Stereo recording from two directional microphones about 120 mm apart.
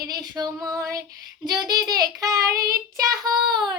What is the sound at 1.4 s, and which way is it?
Child singing, 35° right (ahead or behind).